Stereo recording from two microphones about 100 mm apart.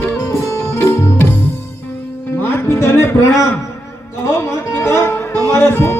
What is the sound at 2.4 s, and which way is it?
Music, 25° left (ahead or behind).